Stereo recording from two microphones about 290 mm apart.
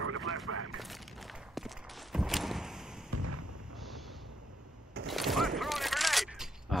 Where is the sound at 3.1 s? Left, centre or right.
Right.